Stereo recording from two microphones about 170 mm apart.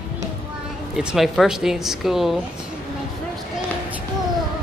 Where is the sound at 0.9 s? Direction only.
Centre (ahead or behind).